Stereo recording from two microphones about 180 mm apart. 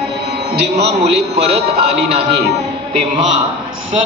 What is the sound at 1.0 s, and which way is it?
Speech, 35° right (ahead or behind).